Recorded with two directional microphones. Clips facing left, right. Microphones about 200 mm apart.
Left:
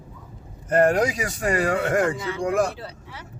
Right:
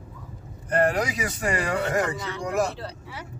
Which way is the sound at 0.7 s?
45° left (ahead or behind).